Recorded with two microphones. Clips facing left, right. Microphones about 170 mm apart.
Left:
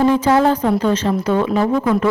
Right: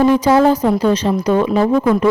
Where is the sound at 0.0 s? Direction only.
10° right (ahead or behind).